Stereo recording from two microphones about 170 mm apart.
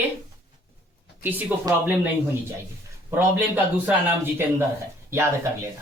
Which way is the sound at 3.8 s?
10° right (ahead or behind).